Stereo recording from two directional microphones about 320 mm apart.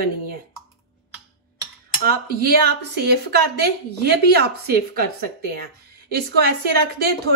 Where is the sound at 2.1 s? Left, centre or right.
Right.